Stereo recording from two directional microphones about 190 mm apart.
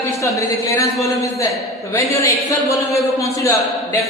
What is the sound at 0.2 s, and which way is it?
A man's voice, 15° left (ahead or behind).